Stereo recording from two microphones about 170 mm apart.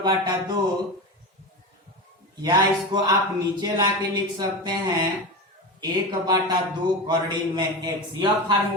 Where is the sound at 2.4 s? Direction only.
25° right (ahead or behind).